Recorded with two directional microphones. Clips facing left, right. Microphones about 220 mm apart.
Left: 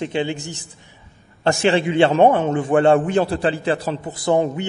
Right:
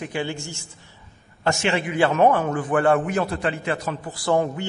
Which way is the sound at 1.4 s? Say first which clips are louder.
Left 6 dB; 35° left (ahead or behind).